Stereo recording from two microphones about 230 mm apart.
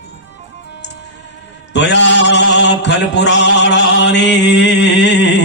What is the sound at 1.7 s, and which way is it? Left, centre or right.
Mantra, left.